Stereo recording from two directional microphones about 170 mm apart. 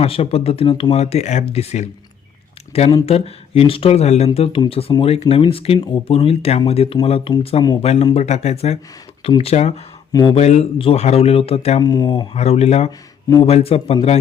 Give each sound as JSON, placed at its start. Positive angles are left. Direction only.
{"t": 0.0, "sound": "speech", "side_deg": 35}
{"t": 10.1, "sound": "speech", "side_deg": 25}
{"t": 10.3, "sound": "speech", "side_deg": 40}
{"t": 11.8, "sound": "speech", "side_deg": 25}